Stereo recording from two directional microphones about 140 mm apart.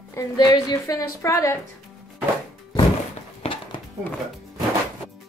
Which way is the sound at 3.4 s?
40° left (ahead or behind).